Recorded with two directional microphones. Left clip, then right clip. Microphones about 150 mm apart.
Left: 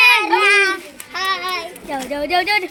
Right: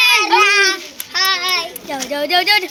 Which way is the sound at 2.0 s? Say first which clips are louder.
Right 3 dB; 15° left (ahead or behind).